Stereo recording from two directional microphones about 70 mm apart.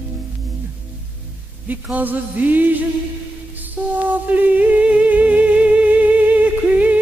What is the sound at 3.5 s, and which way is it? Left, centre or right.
Music, right.